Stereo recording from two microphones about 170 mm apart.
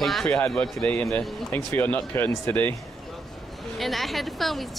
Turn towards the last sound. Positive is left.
turn(degrees=0)  # may be behind; listen again after turning